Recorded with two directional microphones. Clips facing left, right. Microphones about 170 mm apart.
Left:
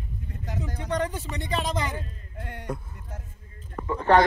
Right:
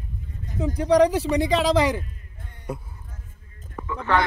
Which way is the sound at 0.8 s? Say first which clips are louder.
Right 12 dB; 90° right.